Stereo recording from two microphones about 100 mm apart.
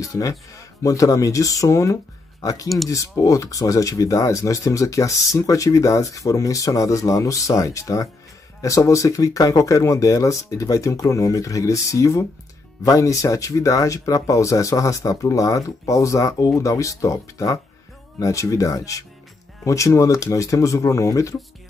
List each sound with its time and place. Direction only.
0.0 s speech: 35° left (ahead or behind)